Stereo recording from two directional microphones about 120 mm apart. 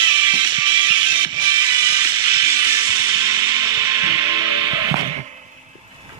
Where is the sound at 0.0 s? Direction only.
40° right (ahead or behind).